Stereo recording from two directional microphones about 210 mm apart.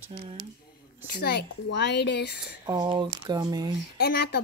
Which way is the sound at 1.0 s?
50° left (ahead or behind).